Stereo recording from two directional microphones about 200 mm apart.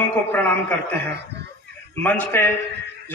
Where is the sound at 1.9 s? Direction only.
10° left (ahead or behind).